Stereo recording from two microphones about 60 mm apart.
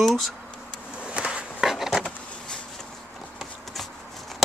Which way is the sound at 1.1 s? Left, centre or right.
Centre.